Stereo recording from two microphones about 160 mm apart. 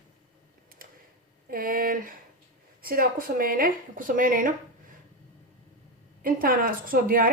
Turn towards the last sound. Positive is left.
turn(degrees=-65)  # may be behind; listen again after turning